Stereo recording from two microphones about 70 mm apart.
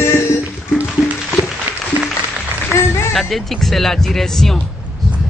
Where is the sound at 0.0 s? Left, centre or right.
Left.